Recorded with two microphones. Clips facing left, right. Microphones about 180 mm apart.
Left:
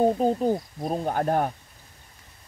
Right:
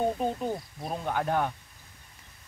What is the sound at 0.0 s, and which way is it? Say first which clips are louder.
Speech: left 7 dB; 35° left (ahead or behind).